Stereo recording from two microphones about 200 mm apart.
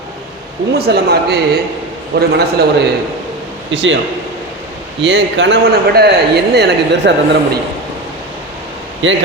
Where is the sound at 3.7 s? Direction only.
65° right (ahead or behind).